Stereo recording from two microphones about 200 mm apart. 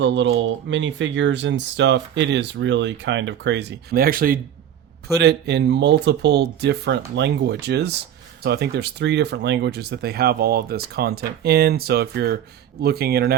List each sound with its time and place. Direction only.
0.0 s speech: 65° right (ahead or behind)